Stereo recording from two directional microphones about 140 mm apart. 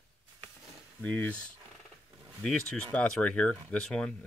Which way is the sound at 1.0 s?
10° left (ahead or behind).